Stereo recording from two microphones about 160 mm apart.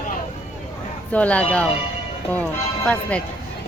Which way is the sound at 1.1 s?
10° left (ahead or behind).